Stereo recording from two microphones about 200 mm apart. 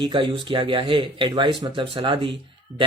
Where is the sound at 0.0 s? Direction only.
25° right (ahead or behind).